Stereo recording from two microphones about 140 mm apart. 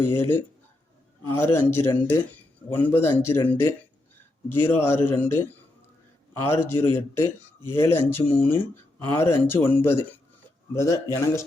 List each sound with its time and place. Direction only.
0.0 s speech: 15° left (ahead or behind)